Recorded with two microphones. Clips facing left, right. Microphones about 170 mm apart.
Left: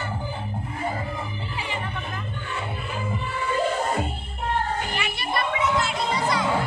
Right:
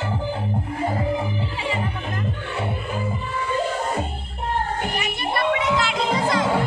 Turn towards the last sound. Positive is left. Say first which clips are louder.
# right 3 dB
turn(degrees=-90)